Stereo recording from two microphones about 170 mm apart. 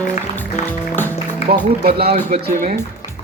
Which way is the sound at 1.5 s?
70° right (ahead or behind).